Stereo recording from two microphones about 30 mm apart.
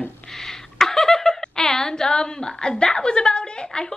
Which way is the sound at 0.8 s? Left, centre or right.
Centre.